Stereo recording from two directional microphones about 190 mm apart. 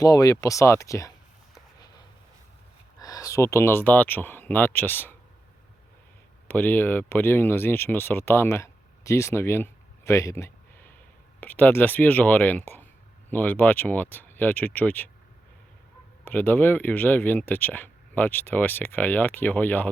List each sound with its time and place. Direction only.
0.0 s speech: 20° left (ahead or behind)
3.0 s speech: 20° left (ahead or behind)
6.5 s speech: 10° left (ahead or behind)
16.2 s speech: 10° left (ahead or behind)